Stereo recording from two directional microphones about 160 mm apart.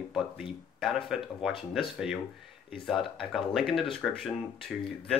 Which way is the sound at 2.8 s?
Centre (ahead or behind).